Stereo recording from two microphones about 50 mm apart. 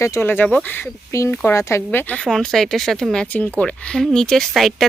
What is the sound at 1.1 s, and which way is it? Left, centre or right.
Speech, left.